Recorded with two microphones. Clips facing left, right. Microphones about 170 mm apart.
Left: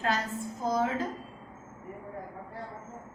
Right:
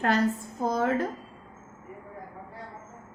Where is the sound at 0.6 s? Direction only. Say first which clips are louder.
Right 2 dB; 55° right (ahead or behind).